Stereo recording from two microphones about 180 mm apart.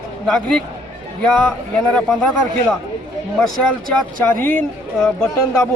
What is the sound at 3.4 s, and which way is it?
A man's voice, 5° left (ahead or behind).